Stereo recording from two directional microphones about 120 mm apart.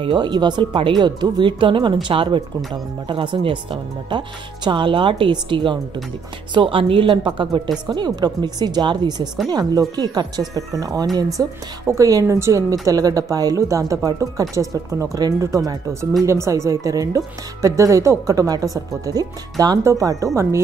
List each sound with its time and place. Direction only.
0.0 s speech: 40° right (ahead or behind)
4.6 s a woman's voice: 40° right (ahead or behind); by 20.6 s 25° right (ahead or behind)